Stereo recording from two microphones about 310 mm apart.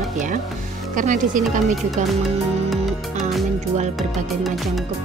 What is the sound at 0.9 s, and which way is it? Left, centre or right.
Speech, right.